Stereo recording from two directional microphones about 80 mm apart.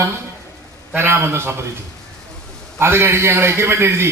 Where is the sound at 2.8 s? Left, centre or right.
Right.